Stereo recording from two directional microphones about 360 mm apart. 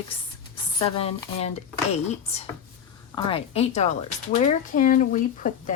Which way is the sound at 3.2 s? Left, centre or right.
Centre.